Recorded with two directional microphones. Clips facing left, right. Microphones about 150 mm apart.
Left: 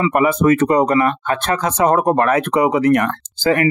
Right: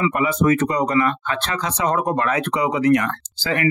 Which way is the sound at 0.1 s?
55° left (ahead or behind).